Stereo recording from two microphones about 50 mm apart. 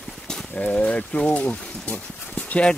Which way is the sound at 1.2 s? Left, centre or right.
Left.